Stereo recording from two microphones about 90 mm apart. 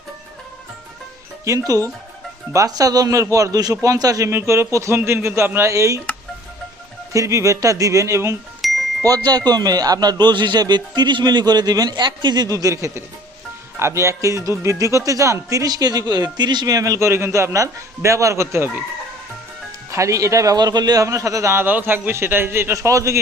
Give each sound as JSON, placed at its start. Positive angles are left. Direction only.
{"t": 1.5, "sound": "a man's voice", "side_deg": -40}
{"t": 4.3, "sound": "speech", "side_deg": -30}
{"t": 7.1, "sound": "speech", "side_deg": -35}
{"t": 8.6, "sound": "chime", "side_deg": 0}
{"t": 9.0, "sound": "a man's voice", "side_deg": -45}
{"t": 19.9, "sound": "speech", "side_deg": -35}
{"t": 21.0, "sound": "a man's voice", "side_deg": -35}